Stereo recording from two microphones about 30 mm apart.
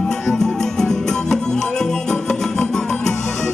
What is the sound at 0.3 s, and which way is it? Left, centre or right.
Music, centre.